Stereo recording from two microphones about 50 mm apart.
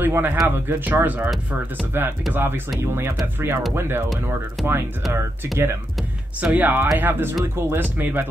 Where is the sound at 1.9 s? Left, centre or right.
Right.